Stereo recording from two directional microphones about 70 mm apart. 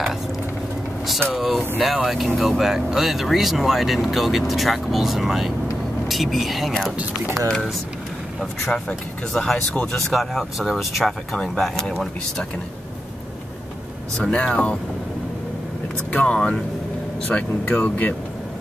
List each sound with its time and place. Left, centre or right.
1.3 s speech: centre
11.3 s speech: centre
14.1 s speech: centre
16.1 s speech: centre
17.3 s speech: left